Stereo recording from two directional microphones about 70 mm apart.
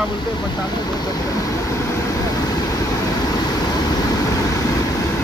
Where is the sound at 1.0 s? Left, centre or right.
Left.